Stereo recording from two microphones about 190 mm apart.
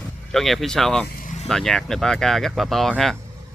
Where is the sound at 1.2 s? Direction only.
40° left (ahead or behind).